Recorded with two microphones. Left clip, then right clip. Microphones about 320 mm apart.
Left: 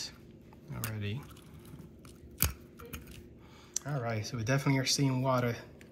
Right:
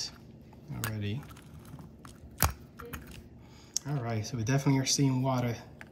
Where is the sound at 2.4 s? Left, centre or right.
Centre.